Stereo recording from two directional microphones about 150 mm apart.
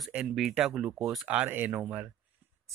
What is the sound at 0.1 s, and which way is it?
Speech, 5° right (ahead or behind).